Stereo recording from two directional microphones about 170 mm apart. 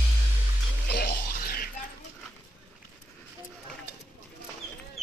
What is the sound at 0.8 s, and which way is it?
Music, 60° left (ahead or behind).